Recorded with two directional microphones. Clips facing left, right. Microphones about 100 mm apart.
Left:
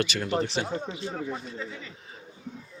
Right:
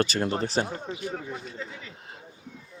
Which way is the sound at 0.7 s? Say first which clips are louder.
Left 1 dB; 25° left (ahead or behind).